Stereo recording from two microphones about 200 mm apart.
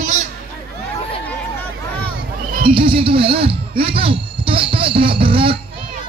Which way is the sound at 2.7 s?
25° right (ahead or behind).